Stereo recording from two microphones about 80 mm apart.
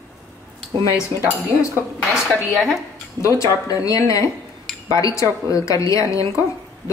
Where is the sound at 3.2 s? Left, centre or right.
Left.